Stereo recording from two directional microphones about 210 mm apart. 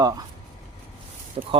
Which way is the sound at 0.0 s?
15° right (ahead or behind).